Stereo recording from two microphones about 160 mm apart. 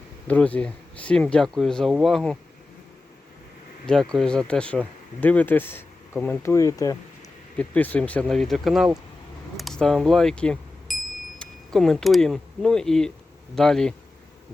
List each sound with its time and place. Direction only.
0.3 s speech: 10° left (ahead or behind)
3.8 s speech: 5° left (ahead or behind)
6.4 s speech: 20° left (ahead or behind)
7.6 s speech: 10° left (ahead or behind)